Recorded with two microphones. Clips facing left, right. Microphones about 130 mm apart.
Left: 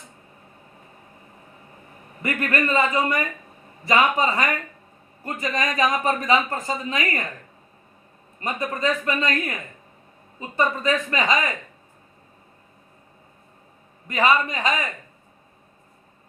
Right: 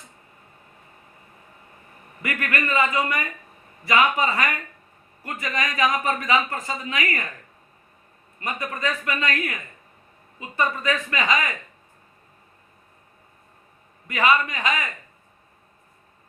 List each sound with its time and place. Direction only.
2.2 s a man's voice: 35° left (ahead or behind)
8.4 s speech: 25° left (ahead or behind)
10.6 s speech: 30° left (ahead or behind)
14.1 s a man's voice: 30° left (ahead or behind)